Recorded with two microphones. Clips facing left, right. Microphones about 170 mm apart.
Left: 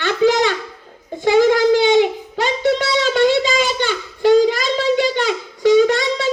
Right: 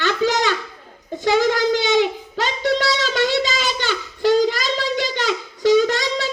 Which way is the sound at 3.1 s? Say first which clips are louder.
Left 5 dB; 50° left (ahead or behind).